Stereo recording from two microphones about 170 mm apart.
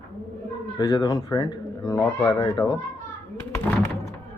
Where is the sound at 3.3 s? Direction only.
15° left (ahead or behind).